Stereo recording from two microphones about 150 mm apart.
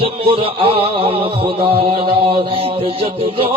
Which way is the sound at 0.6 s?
40° right (ahead or behind).